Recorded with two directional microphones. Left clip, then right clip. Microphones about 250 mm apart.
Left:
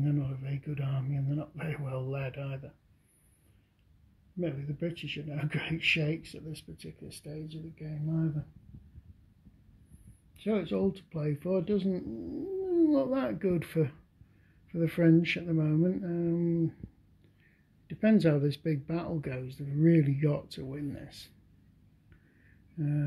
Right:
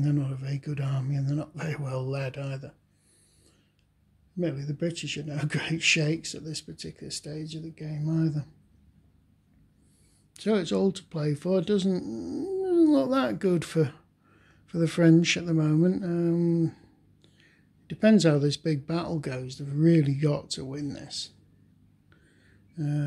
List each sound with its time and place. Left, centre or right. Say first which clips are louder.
0.0 s speech: right 4 dB; centre
4.4 s speech: right 5 dB; centre
10.3 s speech: right 5 dB; right; by 21.3 s centre
22.8 s speech: right 3 dB; centre